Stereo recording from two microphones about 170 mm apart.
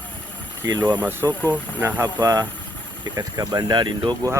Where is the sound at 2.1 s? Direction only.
25° right (ahead or behind).